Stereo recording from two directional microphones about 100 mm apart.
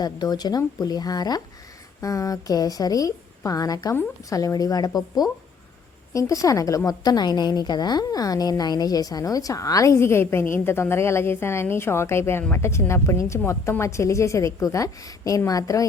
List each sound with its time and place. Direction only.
0.0 s a woman's voice: 45° left (ahead or behind)